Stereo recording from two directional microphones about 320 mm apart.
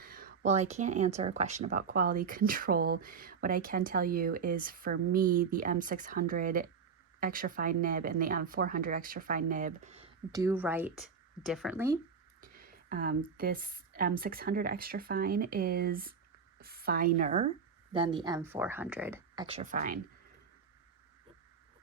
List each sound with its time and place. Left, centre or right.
0.0 s speech: right; by 11.9 s centre
12.4 s a woman's voice: right